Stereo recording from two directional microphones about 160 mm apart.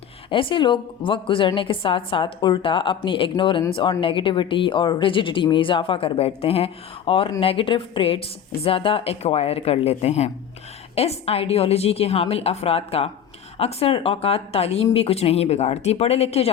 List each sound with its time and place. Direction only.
0.3 s a woman's voice: 30° left (ahead or behind)